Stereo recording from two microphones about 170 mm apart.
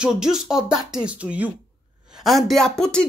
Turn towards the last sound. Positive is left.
turn(degrees=5)  # may be behind; listen again after turning